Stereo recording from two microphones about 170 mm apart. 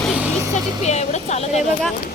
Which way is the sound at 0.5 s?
40° left (ahead or behind).